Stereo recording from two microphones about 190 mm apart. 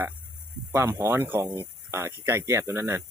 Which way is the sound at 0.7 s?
15° right (ahead or behind).